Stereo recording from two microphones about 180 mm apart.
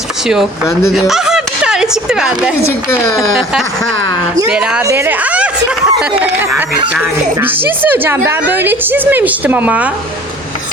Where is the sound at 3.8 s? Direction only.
90° right.